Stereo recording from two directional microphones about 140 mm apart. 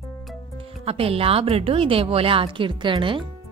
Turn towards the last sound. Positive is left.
turn(degrees=-35)  # may be behind; listen again after turning